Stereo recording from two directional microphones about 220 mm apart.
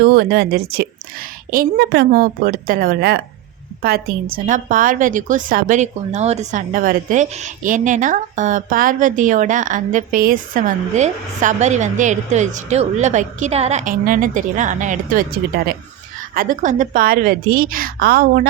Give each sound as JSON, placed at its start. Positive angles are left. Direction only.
{"t": 0.0, "sound": "a woman's voice", "side_deg": -45}